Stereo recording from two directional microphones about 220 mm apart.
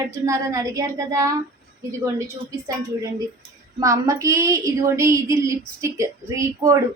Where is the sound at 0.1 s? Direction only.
15° right (ahead or behind).